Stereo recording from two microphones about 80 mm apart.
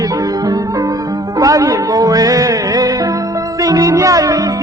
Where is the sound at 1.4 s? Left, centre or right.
Right.